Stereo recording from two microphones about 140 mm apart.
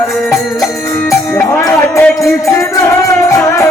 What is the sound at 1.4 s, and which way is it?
Music, 15° left (ahead or behind).